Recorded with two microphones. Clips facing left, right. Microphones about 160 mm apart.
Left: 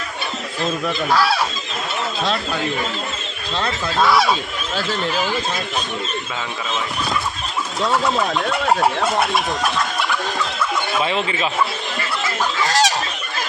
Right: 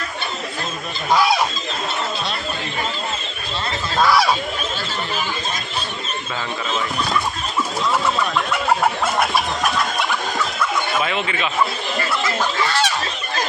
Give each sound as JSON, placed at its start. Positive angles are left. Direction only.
{"t": 1.1, "sound": "speech", "side_deg": -15}
{"t": 4.0, "sound": "speech", "side_deg": 0}
{"t": 11.1, "sound": "speech", "side_deg": 30}
{"t": 12.6, "sound": "fowl", "side_deg": 40}